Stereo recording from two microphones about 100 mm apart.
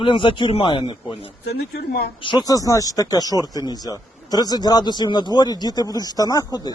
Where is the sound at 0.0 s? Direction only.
55° left (ahead or behind).